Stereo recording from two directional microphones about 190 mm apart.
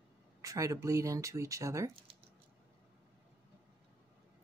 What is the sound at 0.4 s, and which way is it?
Speech, 15° right (ahead or behind).